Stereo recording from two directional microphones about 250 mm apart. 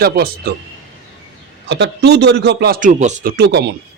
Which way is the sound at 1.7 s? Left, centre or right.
Right.